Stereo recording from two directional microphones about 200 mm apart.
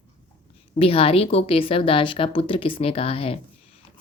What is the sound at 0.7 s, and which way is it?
A woman's voice, 30° left (ahead or behind).